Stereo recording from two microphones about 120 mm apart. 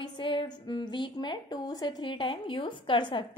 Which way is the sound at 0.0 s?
45° left (ahead or behind).